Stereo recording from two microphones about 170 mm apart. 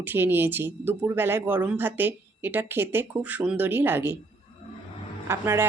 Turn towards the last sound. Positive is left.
turn(degrees=-15)  # may be behind; listen again after turning